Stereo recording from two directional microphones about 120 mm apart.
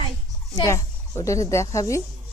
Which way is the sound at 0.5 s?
30° left (ahead or behind).